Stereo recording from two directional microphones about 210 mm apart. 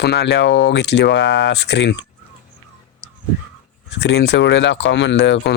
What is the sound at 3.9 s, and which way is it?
Speech, 55° left (ahead or behind).